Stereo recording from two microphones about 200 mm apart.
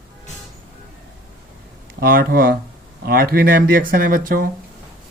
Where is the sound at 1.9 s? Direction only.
50° right (ahead or behind).